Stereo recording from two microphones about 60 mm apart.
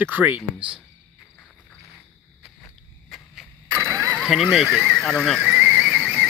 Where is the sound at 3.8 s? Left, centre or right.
Right.